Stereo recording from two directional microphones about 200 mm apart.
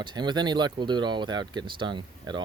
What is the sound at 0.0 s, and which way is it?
Speech, 20° right (ahead or behind).